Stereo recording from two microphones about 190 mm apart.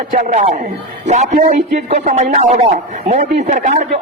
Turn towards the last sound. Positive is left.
turn(degrees=-40)  # may be behind; listen again after turning